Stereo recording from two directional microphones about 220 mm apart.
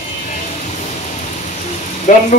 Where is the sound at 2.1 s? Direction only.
35° left (ahead or behind).